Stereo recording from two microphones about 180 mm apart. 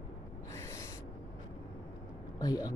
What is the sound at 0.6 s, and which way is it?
Owl, 15° left (ahead or behind).